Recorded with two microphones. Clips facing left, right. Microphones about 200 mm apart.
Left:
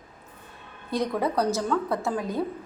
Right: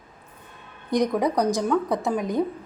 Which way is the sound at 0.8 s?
15° right (ahead or behind).